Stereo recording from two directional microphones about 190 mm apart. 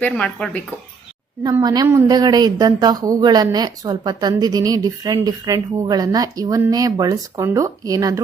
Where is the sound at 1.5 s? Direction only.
20° right (ahead or behind).